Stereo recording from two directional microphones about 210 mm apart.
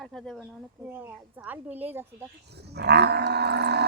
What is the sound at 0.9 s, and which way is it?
Speech, 10° right (ahead or behind).